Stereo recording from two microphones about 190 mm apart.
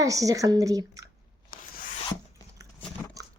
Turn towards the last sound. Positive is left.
turn(degrees=-20)  # may be behind; listen again after turning